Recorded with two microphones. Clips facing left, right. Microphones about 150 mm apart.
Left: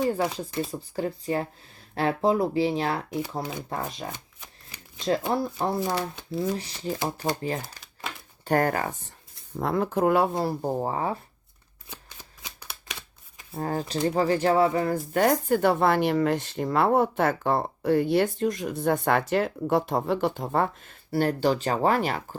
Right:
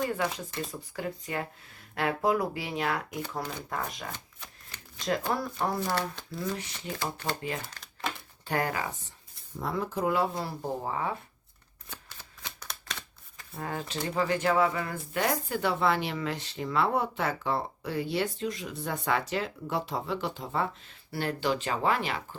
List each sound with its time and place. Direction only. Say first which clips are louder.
0.1 s speech: left 5 dB; 30° left (ahead or behind); by 6.6 s 15° left (ahead or behind)
6.6 s speech: left 3 dB; 35° left (ahead or behind)
7.0 s speech: left 4 dB; 15° left (ahead or behind)
8.4 s speech: left 7 dB; 45° left (ahead or behind)
9.6 s speech: left 7 dB; 60° left (ahead or behind)
10.4 s speech: left 7 dB; 40° left (ahead or behind)
11.9 s shuffling cards: left 2 dB; 10° left (ahead or behind)
13.6 s speech: left 7 dB; 40° left (ahead or behind)